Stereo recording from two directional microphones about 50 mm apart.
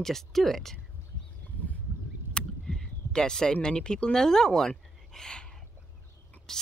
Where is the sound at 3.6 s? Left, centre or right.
Centre.